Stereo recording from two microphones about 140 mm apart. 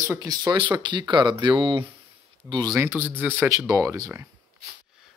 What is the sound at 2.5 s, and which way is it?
Speech, 25° right (ahead or behind).